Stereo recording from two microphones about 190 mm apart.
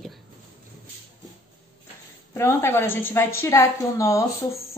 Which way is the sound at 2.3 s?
15° left (ahead or behind).